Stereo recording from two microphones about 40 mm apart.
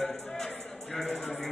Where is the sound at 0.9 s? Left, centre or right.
Centre.